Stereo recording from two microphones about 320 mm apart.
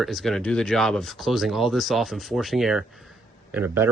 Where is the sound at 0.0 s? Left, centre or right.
Centre.